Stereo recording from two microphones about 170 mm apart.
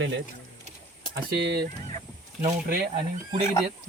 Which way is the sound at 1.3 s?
75° right (ahead or behind).